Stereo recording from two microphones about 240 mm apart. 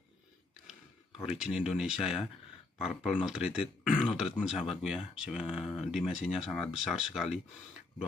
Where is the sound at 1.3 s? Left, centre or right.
Centre.